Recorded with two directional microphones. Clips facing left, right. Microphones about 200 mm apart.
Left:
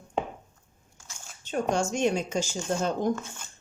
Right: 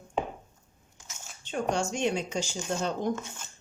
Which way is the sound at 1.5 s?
45° left (ahead or behind).